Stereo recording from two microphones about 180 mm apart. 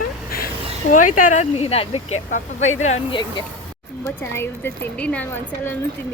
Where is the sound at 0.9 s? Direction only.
45° left (ahead or behind); by 3.4 s 25° left (ahead or behind).